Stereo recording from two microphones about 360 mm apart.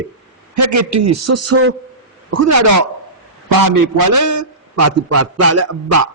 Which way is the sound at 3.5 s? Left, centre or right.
Right.